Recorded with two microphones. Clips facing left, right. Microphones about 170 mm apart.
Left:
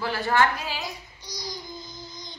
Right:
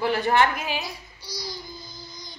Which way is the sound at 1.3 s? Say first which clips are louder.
Right 1 dB; 15° left (ahead or behind).